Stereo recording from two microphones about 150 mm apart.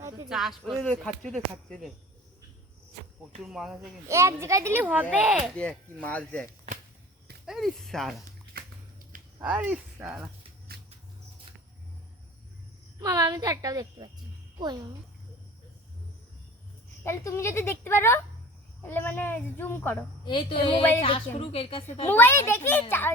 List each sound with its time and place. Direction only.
0.3 s speech: centre (ahead or behind)
3.4 s speech: 5° right (ahead or behind)
4.1 s a woman's voice: 20° right (ahead or behind)
5.5 s a woman's voice: 10° left (ahead or behind)
7.4 s speech: centre (ahead or behind)
8.6 s a sound: 85° right
9.4 s speech: 10° right (ahead or behind)
10.7 s mouse: 90° right
13.0 s a woman's voice: 25° right (ahead or behind)
17.0 s a woman's voice: 15° left (ahead or behind)
20.2 s a woman's voice: 35° left (ahead or behind)
22.0 s a woman's voice: 15° left (ahead or behind)